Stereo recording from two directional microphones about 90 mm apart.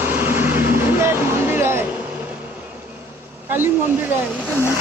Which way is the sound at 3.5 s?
25° right (ahead or behind).